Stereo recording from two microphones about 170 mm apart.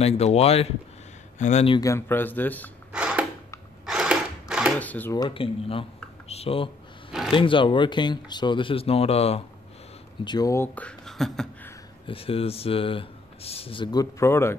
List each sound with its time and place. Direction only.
0.0 s speech: 40° left (ahead or behind)
1.8 s speech: 15° left (ahead or behind)
2.9 s a sound: 5° right (ahead or behind)
4.7 s speech: 10° left (ahead or behind)
5.1 s speech: 25° left (ahead or behind)
10.2 s speech: 25° left (ahead or behind); by 11.4 s centre (ahead or behind)
12.1 s speech: 35° left (ahead or behind)
14.2 s speech: 15° left (ahead or behind)